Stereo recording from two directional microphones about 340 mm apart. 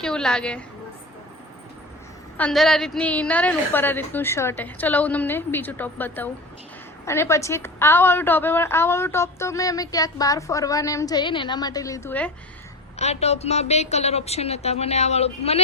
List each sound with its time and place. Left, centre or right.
0.0 s a woman's voice: centre
2.4 s a woman's voice: centre
13.0 s a woman's voice: centre